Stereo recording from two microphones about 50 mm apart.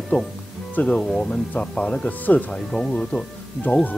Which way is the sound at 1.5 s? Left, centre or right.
Left.